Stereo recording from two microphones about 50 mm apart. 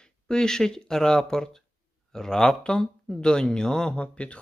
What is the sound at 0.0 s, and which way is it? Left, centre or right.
Speech, centre.